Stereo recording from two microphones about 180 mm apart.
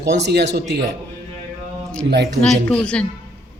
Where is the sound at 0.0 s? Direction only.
70° right (ahead or behind).